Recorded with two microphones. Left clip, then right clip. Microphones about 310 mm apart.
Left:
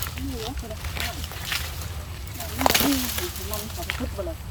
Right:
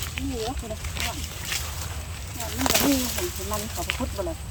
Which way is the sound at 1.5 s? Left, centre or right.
Centre.